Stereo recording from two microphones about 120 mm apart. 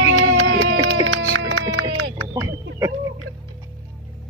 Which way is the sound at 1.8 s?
30° right (ahead or behind).